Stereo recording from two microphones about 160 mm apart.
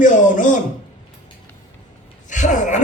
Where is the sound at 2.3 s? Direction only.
50° left (ahead or behind).